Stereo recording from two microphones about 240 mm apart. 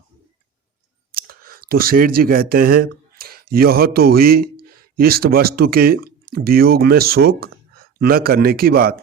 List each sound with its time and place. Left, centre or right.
1.1 s speech: right